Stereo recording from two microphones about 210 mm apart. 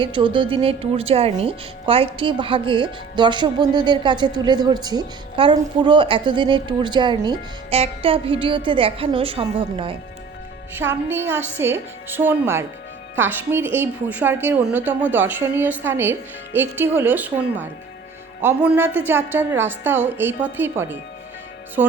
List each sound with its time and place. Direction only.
0.0 s speech: 25° right (ahead or behind)
11.1 s a woman's voice: 10° right (ahead or behind)